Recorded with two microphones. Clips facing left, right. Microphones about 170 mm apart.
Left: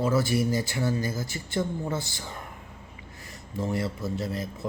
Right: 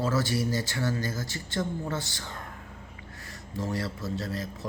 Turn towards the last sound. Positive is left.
turn(degrees=15)  # may be behind; listen again after turning